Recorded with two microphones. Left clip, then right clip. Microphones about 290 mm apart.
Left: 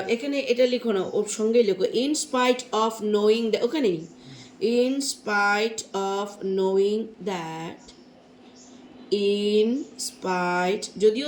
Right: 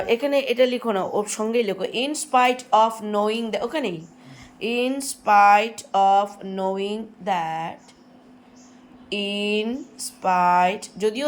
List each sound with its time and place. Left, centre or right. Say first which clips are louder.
0.1 s speech: right 4 dB; centre
9.0 s speech: left 2 dB; centre